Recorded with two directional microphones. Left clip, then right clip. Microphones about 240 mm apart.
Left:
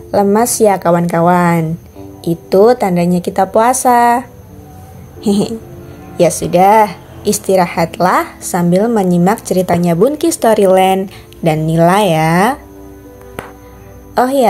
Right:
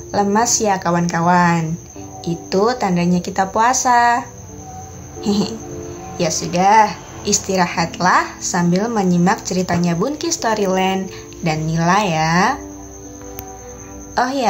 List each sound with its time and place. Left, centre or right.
0.1 s a woman's voice: left
5.2 s a woman's voice: left
14.1 s a woman's voice: left